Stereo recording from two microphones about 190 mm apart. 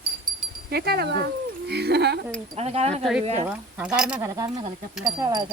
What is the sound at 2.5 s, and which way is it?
Speech, 35° right (ahead or behind).